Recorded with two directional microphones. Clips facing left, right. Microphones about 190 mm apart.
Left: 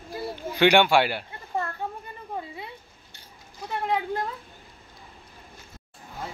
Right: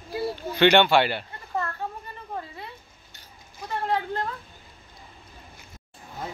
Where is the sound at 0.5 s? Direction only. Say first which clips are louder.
Right 1 dB; 10° left (ahead or behind).